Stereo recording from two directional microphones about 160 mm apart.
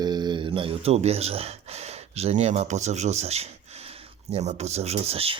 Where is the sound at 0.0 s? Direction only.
25° right (ahead or behind).